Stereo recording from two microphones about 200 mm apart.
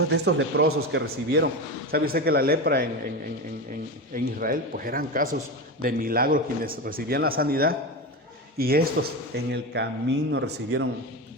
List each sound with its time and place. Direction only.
0.1 s a man's voice: 65° right (ahead or behind)
1.0 s a man's voice: 55° right (ahead or behind)
4.1 s a man's voice: 45° right (ahead or behind)